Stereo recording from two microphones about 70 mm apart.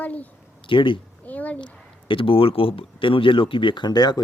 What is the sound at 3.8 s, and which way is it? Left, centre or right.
Speech, left.